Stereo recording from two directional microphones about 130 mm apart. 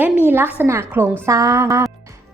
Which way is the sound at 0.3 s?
15° right (ahead or behind).